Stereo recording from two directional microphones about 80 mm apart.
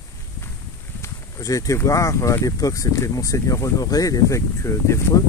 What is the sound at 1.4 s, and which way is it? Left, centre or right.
Speech, left.